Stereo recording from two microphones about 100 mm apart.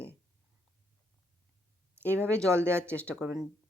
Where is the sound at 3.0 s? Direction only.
10° left (ahead or behind).